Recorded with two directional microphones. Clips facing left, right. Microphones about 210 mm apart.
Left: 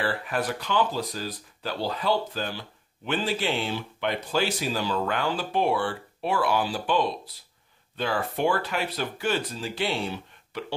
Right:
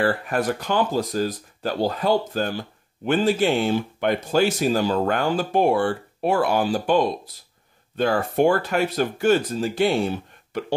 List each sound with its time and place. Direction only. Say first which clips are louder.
0.0 s speech: right 6 dB; 45° right (ahead or behind)